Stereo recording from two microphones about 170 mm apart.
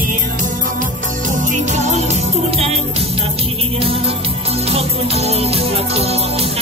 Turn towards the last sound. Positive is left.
turn(degrees=-35)  # may be behind; listen again after turning